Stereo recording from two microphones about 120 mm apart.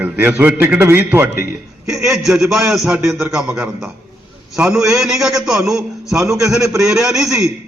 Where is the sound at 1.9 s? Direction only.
5° right (ahead or behind).